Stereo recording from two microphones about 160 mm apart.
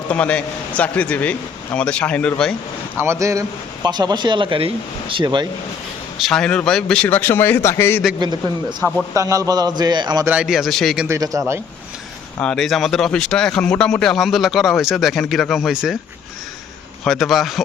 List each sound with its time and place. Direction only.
0.1 s a man's voice: 10° left (ahead or behind)
3.0 s speech: 15° right (ahead or behind)
6.1 s a man's voice: centre (ahead or behind)
8.8 s a man's voice: 15° right (ahead or behind)
10.2 s speech: 5° right (ahead or behind)
11.1 s speech: 20° right (ahead or behind)
12.4 s speech: 5° left (ahead or behind)
17.0 s speech: centre (ahead or behind)